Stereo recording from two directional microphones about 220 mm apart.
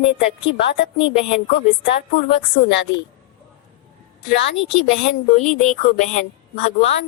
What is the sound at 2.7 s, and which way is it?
Speech, 55° left (ahead or behind).